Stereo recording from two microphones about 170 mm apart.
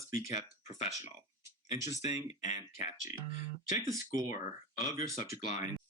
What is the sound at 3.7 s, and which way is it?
Speech, 20° right (ahead or behind).